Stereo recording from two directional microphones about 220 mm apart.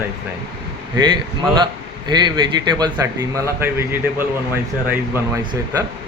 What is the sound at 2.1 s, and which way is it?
Speech, 20° right (ahead or behind).